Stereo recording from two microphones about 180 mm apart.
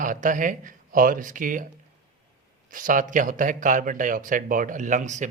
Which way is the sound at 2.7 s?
50° right (ahead or behind).